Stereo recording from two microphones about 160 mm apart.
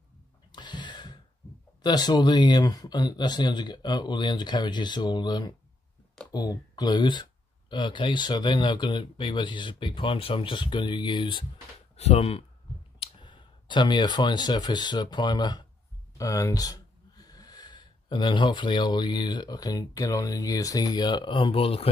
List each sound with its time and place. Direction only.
0.5 s a sound: 30° left (ahead or behind)
1.8 s speech: 25° left (ahead or behind)
12.0 s speech: 40° left (ahead or behind)